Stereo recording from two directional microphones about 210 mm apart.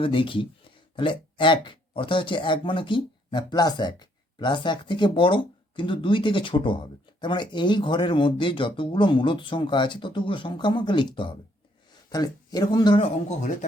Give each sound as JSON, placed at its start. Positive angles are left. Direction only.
{"t": 0.0, "sound": "speech", "side_deg": 25}